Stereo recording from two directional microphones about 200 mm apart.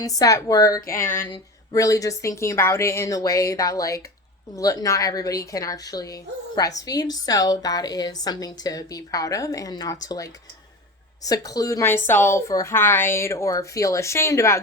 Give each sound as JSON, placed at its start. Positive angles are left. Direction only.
{"t": 0.0, "sound": "a woman's voice", "side_deg": 15}